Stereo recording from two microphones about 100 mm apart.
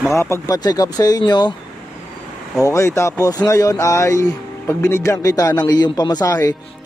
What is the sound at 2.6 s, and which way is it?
A man's voice, 30° left (ahead or behind).